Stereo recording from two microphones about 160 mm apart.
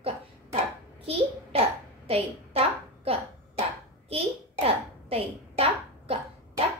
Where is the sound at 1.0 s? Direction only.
40° right (ahead or behind).